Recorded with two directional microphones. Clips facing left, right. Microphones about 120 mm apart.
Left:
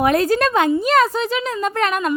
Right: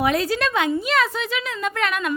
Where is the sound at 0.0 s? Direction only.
50° left (ahead or behind).